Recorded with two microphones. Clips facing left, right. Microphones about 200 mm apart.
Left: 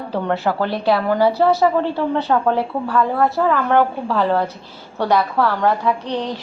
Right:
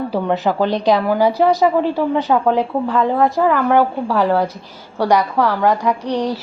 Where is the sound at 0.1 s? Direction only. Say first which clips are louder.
Left 2 dB; 15° right (ahead or behind).